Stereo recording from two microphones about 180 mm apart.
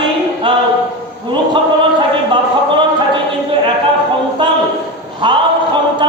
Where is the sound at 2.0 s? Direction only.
25° right (ahead or behind).